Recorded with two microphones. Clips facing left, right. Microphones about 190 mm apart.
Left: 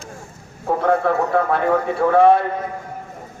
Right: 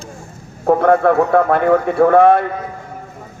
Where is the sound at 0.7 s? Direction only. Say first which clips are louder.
Right 6 dB; 55° right (ahead or behind).